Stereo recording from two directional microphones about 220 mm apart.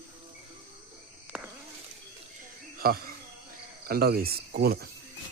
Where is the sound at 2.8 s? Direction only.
45° right (ahead or behind).